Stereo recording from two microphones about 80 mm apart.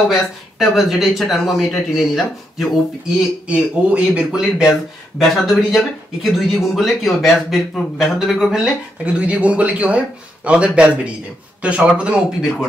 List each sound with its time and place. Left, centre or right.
0.1 s speech: centre
3.4 s a man's voice: centre
9.2 s a man's voice: centre